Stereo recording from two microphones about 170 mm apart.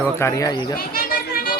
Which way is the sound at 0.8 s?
60° left (ahead or behind).